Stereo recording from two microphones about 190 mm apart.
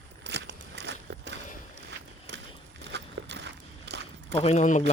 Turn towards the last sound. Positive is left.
turn(degrees=40)  # may be behind; listen again after turning